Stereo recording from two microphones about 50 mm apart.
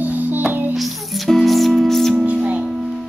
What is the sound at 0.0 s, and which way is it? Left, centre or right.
Music, right.